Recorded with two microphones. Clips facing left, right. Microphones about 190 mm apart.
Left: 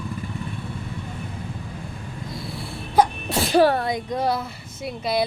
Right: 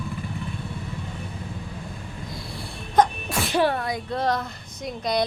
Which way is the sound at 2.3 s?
Centre (ahead or behind).